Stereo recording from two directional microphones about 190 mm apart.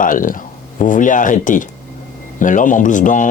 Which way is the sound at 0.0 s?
45° left (ahead or behind).